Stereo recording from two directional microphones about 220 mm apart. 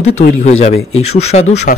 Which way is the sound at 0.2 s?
30° left (ahead or behind).